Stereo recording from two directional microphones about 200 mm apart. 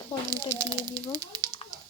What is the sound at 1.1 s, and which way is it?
Speech, 20° right (ahead or behind).